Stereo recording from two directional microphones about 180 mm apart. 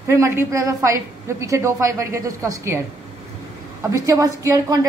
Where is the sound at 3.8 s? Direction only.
20° right (ahead or behind).